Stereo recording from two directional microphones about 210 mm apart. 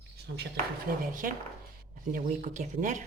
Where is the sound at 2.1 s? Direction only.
40° right (ahead or behind).